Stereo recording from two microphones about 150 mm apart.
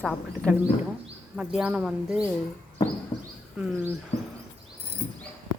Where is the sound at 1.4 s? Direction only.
5° right (ahead or behind).